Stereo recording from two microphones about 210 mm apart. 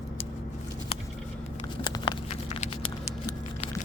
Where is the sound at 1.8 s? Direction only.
20° left (ahead or behind).